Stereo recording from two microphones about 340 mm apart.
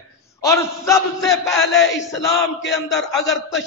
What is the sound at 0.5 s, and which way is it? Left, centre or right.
A man's voice, centre.